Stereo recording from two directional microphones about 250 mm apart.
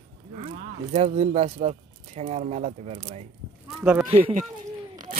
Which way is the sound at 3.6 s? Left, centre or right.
Centre.